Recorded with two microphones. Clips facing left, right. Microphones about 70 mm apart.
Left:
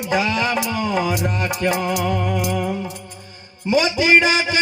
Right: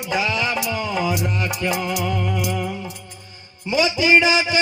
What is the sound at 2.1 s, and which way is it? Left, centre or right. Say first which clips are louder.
Music: left 2 dB; left.